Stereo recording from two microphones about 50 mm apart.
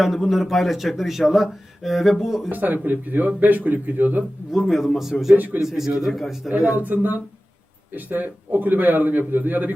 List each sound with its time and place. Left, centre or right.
0.0 s speech: centre
2.5 s a man's voice: right
4.5 s speech: centre
5.3 s speech: right
5.6 s a man's voice: centre
6.5 s a man's voice: right